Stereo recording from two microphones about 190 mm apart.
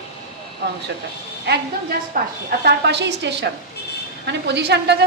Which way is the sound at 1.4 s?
60° right (ahead or behind).